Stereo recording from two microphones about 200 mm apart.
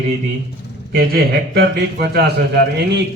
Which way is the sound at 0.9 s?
50° right (ahead or behind).